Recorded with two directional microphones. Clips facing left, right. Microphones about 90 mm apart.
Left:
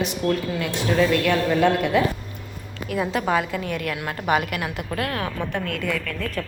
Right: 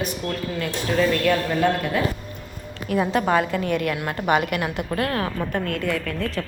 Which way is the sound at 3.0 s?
Centre (ahead or behind).